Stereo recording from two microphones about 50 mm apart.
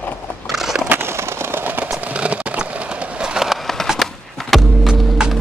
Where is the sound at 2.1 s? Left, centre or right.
Right.